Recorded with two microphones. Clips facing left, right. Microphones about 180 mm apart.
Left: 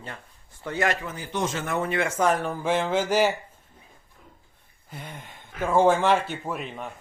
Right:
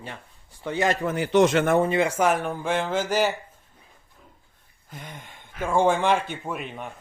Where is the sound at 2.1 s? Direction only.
5° right (ahead or behind).